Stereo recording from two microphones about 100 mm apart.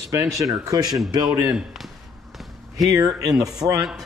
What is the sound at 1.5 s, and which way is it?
Speech, 5° right (ahead or behind).